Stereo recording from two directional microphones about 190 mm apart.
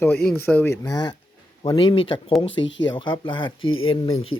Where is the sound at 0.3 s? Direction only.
10° left (ahead or behind); by 2.3 s 25° left (ahead or behind).